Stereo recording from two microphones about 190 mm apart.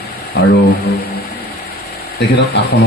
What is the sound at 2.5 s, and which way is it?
Speech, 65° left (ahead or behind).